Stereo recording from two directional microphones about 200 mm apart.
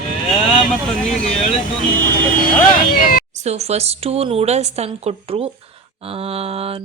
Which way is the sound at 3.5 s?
30° right (ahead or behind).